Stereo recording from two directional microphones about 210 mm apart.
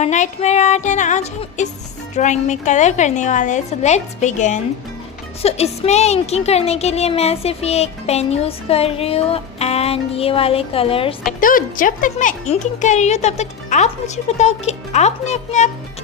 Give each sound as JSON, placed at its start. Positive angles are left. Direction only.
{"t": 0.0, "sound": "speech", "side_deg": 35}
{"t": 11.3, "sound": "speech", "side_deg": 40}